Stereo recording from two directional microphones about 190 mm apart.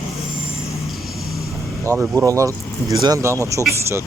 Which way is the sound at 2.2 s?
15° right (ahead or behind).